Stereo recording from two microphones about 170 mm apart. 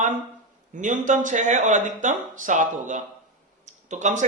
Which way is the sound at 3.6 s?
45° right (ahead or behind).